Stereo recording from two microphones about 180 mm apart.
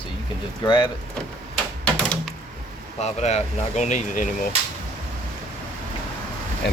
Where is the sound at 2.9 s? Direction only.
40° left (ahead or behind).